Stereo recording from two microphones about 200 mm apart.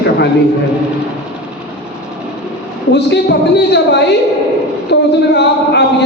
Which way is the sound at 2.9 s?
60° left (ahead or behind).